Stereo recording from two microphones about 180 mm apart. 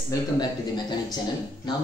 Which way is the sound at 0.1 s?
25° left (ahead or behind).